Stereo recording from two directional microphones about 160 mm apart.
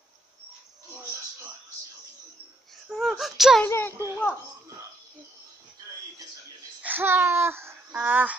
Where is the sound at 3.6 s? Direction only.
15° left (ahead or behind).